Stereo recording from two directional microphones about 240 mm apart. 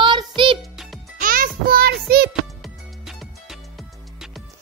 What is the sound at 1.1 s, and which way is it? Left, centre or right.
Music, right.